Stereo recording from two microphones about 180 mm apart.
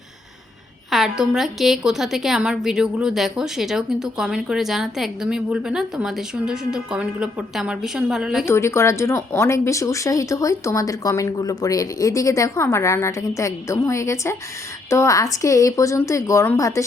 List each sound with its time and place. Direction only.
0.9 s a woman's voice: centre (ahead or behind)
8.4 s speech: 15° left (ahead or behind)